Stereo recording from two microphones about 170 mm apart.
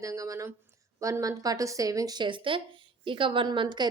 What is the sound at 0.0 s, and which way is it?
A woman's voice, 20° right (ahead or behind).